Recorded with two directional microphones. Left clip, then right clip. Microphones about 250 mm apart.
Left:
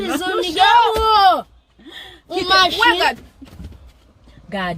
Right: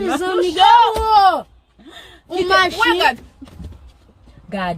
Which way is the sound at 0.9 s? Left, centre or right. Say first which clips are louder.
Even; centre.